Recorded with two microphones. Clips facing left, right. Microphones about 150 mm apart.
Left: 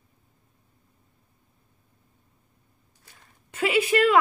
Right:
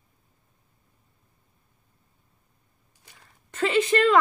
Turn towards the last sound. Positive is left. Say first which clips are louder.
# even
turn(degrees=10)  # may be behind; listen again after turning